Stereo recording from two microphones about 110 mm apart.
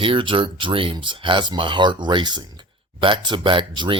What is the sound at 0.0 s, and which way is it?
Speech, 50° right (ahead or behind).